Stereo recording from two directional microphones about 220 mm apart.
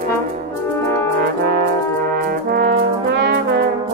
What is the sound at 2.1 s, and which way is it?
Brass instrument, 40° right (ahead or behind).